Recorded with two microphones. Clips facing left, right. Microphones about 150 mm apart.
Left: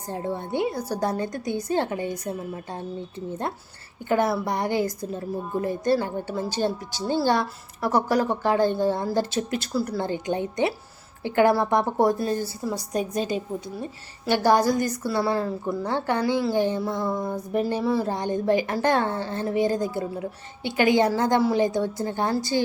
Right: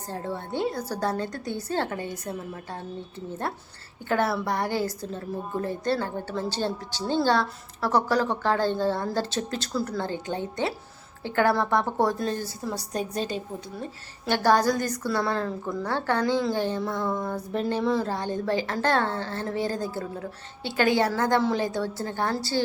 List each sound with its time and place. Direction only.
0.1 s a woman's voice: 15° left (ahead or behind)
4.1 s a woman's voice: 15° left (ahead or behind)